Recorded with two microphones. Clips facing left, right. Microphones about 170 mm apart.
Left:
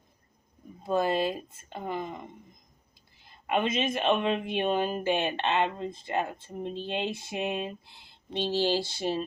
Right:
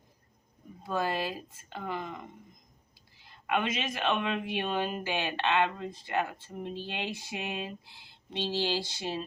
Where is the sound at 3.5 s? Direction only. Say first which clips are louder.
Left 4 dB; 30° left (ahead or behind).